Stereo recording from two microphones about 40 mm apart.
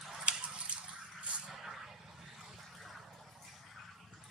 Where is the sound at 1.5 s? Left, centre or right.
Centre.